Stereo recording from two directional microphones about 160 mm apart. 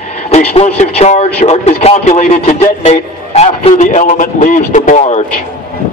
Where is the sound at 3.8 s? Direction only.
50° left (ahead or behind).